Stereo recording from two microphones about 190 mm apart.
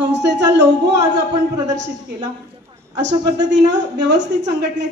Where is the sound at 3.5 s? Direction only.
70° right (ahead or behind).